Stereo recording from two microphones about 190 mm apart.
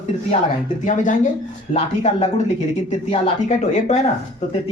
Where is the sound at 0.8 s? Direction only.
40° left (ahead or behind).